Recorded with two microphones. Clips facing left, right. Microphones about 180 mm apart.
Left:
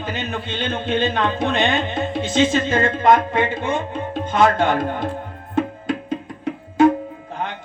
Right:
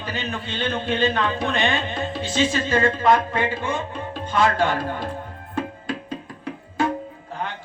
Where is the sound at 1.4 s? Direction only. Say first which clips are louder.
Left 3 dB; 20° left (ahead or behind).